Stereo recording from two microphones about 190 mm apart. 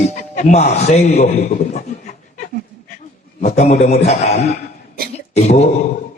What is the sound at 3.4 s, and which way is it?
A man's voice, 35° left (ahead or behind).